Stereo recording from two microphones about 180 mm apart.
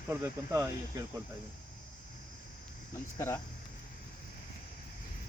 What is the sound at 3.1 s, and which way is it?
Speech, 15° left (ahead or behind).